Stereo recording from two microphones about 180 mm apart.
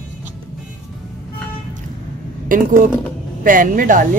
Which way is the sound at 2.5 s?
50° right (ahead or behind).